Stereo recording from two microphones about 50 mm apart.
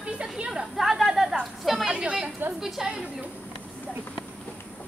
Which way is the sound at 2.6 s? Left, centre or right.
Centre.